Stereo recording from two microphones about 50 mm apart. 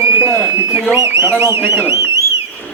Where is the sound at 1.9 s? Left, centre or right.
Right.